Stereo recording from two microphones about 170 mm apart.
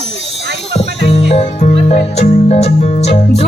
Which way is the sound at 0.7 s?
40° left (ahead or behind).